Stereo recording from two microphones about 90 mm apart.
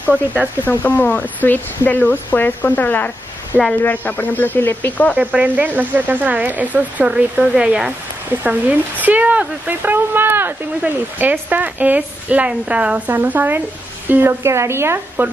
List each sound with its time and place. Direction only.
0.7 s speech: 20° left (ahead or behind)
5.1 s a woman's voice: 15° right (ahead or behind)